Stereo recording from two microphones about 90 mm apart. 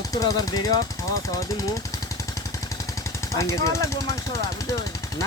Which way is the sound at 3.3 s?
35° left (ahead or behind).